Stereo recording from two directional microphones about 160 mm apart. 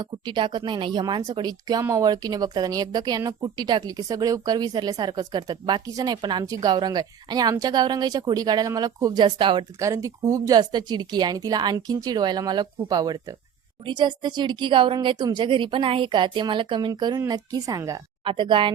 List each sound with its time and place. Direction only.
0.0 s speech: 30° right (ahead or behind)